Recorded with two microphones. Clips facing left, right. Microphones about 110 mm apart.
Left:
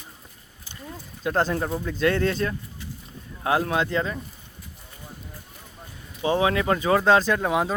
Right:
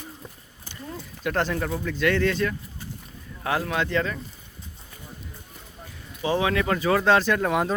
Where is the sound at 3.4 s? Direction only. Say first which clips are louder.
Left 3 dB; 25° left (ahead or behind).